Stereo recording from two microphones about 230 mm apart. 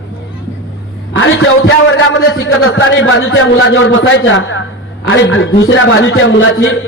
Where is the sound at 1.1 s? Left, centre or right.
Left.